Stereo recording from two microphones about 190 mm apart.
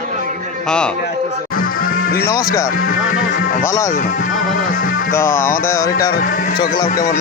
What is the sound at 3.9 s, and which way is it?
Speech, 45° left (ahead or behind).